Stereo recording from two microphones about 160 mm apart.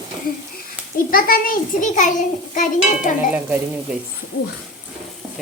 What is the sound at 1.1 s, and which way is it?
A child's voice, 65° left (ahead or behind).